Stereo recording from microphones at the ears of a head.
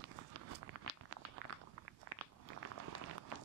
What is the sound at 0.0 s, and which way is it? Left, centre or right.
Walk, right.